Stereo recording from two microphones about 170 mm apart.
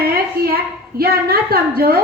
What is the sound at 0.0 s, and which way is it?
A woman's voice, 60° right (ahead or behind).